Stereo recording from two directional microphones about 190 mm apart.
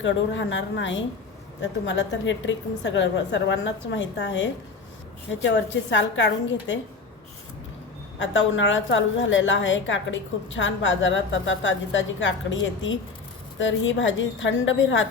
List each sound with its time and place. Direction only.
0.0 s a woman's voice: 80° left
5.9 s a woman's voice: 75° left (ahead or behind)
8.2 s a woman's voice: 80° left